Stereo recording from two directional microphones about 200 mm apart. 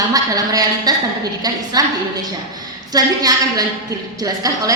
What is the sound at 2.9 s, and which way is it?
A woman's voice, 20° right (ahead or behind).